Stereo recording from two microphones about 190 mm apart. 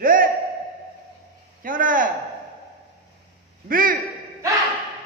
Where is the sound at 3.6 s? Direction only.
45° right (ahead or behind).